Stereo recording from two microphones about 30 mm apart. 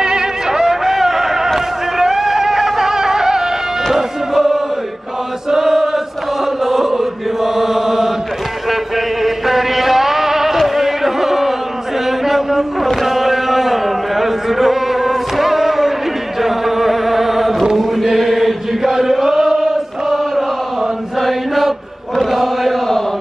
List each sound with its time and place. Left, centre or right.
0.0 s music: right
5.5 s chant: centre
8.6 s a sound: centre
10.7 s music: centre
12.1 s a sound: centre
16.3 s chant: centre
18.8 s chant: centre